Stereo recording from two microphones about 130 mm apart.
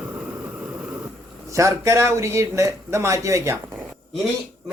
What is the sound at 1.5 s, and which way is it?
Speech, 25° right (ahead or behind).